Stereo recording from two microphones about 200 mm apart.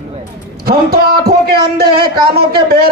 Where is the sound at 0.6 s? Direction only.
50° right (ahead or behind).